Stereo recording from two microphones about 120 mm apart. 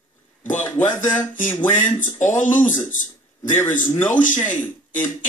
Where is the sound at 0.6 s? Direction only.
15° left (ahead or behind).